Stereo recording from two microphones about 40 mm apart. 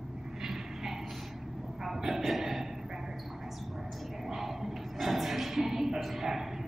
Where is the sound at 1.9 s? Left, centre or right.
Centre.